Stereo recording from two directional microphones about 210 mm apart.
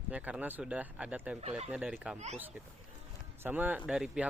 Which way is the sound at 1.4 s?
30° right (ahead or behind).